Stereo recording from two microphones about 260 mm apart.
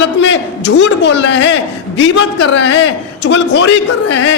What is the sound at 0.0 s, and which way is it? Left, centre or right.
A man's voice, left.